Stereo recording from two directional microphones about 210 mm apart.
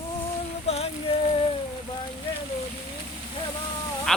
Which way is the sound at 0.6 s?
30° left (ahead or behind).